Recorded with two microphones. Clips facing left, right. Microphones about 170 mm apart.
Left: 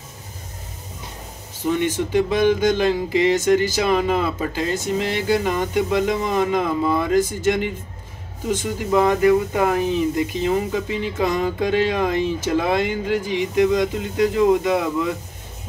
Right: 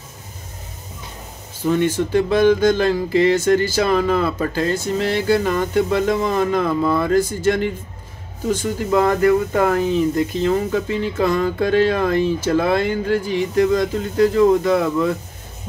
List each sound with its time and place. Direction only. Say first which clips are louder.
1.9 s speech: right 2 dB; 15° left (ahead or behind)